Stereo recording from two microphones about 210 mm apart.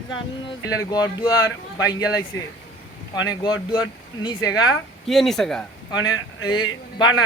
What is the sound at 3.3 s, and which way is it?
Speech, 20° left (ahead or behind).